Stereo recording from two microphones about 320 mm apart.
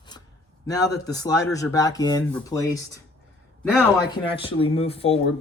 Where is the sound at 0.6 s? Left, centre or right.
Centre.